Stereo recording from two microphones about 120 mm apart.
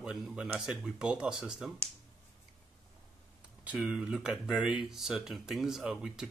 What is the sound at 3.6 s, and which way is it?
Speech, 5° right (ahead or behind).